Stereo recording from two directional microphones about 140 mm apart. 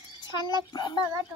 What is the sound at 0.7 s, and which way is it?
Speech, 30° left (ahead or behind).